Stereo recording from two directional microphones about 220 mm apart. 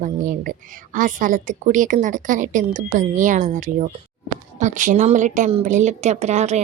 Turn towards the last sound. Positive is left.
turn(degrees=-30)  # may be behind; listen again after turning